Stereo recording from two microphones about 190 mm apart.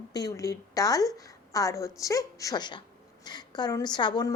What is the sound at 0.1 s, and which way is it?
A woman's voice, 20° left (ahead or behind).